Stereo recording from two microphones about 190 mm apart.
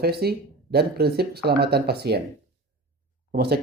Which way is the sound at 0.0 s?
55° right (ahead or behind).